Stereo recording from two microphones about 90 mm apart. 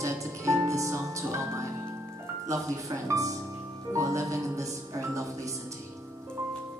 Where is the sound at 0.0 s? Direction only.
35° right (ahead or behind).